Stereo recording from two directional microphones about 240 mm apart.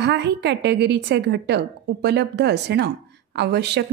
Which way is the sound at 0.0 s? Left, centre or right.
Right.